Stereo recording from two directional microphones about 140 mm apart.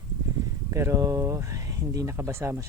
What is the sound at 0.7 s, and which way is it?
Speech, 20° right (ahead or behind).